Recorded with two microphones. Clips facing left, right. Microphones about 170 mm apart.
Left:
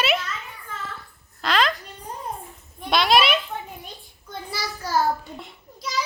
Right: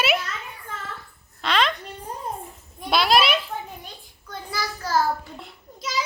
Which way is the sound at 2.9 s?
Centre (ahead or behind).